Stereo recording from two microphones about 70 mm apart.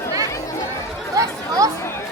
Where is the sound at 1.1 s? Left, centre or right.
Right.